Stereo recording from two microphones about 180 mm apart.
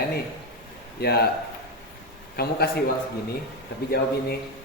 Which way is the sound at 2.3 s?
60° left (ahead or behind).